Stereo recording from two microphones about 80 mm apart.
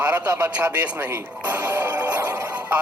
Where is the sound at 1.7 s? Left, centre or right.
Right.